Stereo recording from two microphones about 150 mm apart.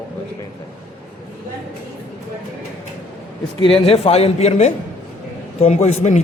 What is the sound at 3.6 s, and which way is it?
Speech, 40° left (ahead or behind).